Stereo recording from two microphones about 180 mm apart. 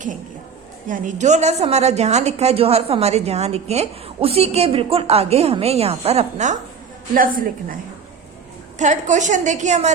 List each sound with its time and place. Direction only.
0.9 s a woman's voice: 45° right (ahead or behind)
8.8 s a woman's voice: 40° right (ahead or behind)